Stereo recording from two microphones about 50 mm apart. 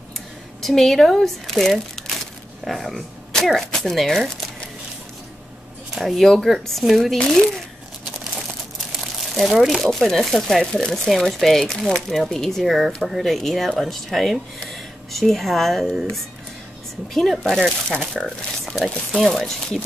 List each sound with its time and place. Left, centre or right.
0.6 s speech: centre
5.9 s speech: centre
6.5 s speech: centre
9.0 s a sound: centre
9.8 s speech: centre
17.1 s speech: centre
17.8 s speech: centre
19.2 s speech: centre